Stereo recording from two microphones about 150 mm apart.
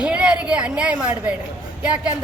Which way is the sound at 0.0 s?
10° right (ahead or behind).